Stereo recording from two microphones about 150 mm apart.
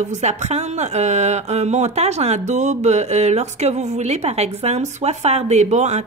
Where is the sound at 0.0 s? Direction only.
50° right (ahead or behind).